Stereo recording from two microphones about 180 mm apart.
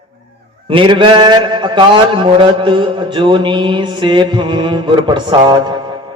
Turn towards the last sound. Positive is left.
turn(degrees=-25)  # may be behind; listen again after turning